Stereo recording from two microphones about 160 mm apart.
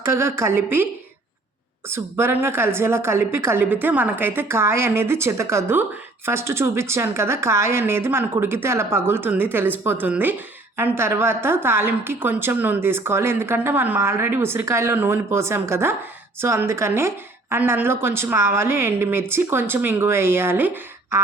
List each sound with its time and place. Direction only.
0.0 s a woman's voice: 15° right (ahead or behind)
1.9 s a woman's voice: 15° right (ahead or behind)